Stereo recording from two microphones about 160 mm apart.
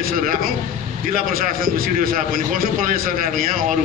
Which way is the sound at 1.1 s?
60° right (ahead or behind).